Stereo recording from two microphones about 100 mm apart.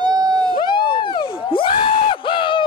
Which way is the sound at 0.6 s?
50° left (ahead or behind).